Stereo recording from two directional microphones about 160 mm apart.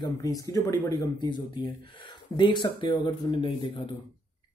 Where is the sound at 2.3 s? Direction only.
30° left (ahead or behind).